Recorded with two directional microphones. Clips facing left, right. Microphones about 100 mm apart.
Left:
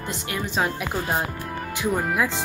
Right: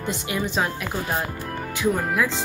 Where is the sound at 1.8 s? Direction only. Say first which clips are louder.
Right 1 dB; 10° left (ahead or behind).